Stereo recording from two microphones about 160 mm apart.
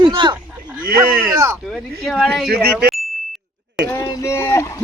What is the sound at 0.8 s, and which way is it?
Speech, 65° right (ahead or behind).